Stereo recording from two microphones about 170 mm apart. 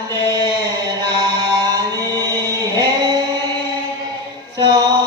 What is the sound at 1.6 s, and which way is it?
Music, 20° right (ahead or behind).